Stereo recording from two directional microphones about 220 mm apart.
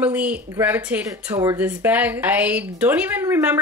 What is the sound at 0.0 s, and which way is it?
A woman's voice, 5° right (ahead or behind).